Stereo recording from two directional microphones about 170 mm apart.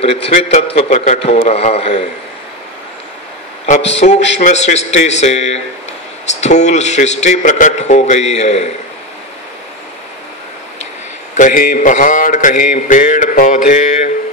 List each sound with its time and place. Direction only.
0.0 s speech: 35° left (ahead or behind)
4.0 s speech: 40° left (ahead or behind)
6.4 s mantra: 45° left (ahead or behind)
11.3 s mantra: 50° left (ahead or behind)